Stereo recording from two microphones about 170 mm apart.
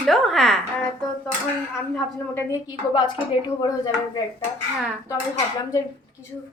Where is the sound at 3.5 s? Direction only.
25° left (ahead or behind).